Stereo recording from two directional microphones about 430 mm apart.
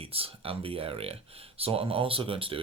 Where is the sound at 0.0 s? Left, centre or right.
Centre.